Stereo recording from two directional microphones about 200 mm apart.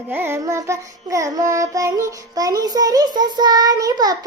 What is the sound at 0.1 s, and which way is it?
Child singing, 10° right (ahead or behind).